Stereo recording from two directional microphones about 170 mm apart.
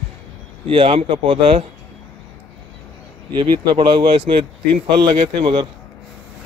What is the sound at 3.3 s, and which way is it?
Speech, 25° right (ahead or behind).